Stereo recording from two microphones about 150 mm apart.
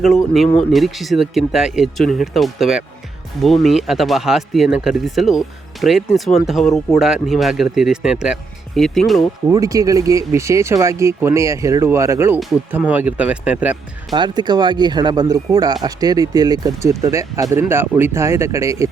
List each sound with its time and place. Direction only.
0.7 s speech: centre (ahead or behind)
9.5 s speech: 20° right (ahead or behind)
14.1 s speech: 30° right (ahead or behind)